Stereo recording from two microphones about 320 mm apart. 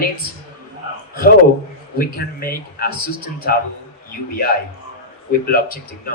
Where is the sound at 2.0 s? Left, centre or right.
Left.